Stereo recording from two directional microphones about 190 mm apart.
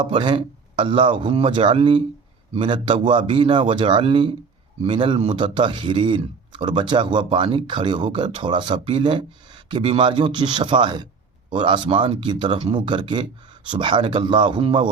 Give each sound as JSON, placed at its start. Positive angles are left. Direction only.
{"t": 0.0, "sound": "speech", "side_deg": -25}